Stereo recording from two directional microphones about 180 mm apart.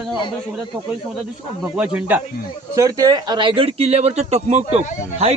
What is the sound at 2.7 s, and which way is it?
Speech, 20° right (ahead or behind).